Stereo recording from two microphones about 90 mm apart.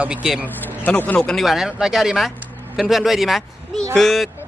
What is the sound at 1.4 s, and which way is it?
Speech, 5° right (ahead or behind).